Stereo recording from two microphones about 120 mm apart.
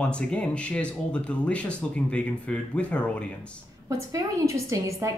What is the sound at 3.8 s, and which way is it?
A woman's voice, 25° right (ahead or behind).